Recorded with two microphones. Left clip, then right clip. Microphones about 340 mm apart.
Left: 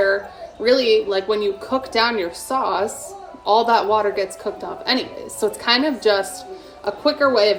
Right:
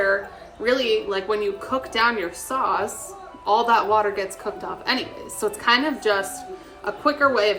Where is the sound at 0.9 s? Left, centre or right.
Centre.